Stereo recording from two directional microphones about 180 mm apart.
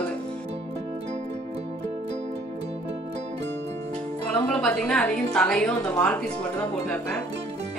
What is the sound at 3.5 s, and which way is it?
Music, 75° right (ahead or behind).